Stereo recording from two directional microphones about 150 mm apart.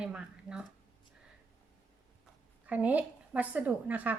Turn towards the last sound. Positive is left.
turn(degrees=-10)  # may be behind; listen again after turning